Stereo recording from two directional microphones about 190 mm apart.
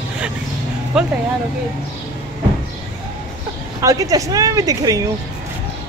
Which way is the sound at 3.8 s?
15° right (ahead or behind).